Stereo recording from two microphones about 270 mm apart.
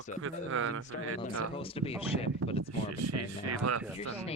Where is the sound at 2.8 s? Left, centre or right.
Right.